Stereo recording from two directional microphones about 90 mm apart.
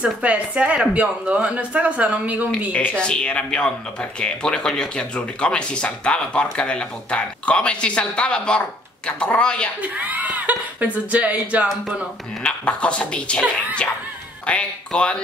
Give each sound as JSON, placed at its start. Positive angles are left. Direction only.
{"t": 0.0, "sound": "speech", "side_deg": -15}
{"t": 2.7, "sound": "speech", "side_deg": 15}
{"t": 9.8, "sound": "speech", "side_deg": -20}
{"t": 12.4, "sound": "speech", "side_deg": 10}